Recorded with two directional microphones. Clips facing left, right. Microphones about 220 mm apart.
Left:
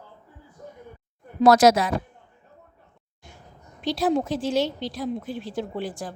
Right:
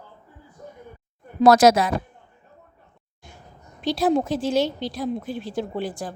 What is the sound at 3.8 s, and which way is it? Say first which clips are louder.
Speech: right 2 dB; 40° right (ahead or behind).